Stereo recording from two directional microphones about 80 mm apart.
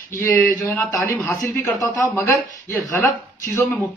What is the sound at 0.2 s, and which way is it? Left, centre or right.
A man's voice, left.